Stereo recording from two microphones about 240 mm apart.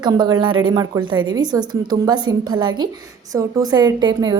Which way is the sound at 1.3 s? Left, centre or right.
Centre.